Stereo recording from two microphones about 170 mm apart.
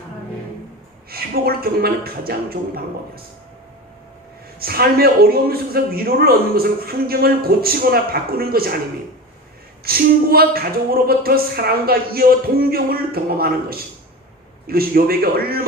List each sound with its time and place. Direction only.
1.1 s a man's voice: 65° right (ahead or behind)
4.6 s a man's voice: 65° right (ahead or behind)
9.8 s a man's voice: 65° right (ahead or behind)
14.7 s a man's voice: 60° right (ahead or behind)